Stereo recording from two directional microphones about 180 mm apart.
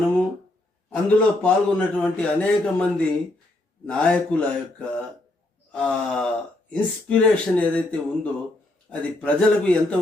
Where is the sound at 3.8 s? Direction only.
5° left (ahead or behind).